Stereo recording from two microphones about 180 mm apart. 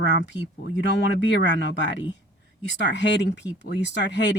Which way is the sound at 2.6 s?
80° left.